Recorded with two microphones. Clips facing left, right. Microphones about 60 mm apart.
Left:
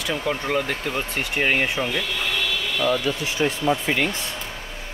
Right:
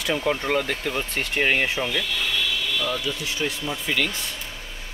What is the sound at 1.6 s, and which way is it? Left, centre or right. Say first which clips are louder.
Speech: left 1 dB; left.